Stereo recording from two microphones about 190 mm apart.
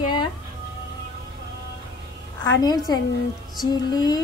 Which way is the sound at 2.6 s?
20° left (ahead or behind).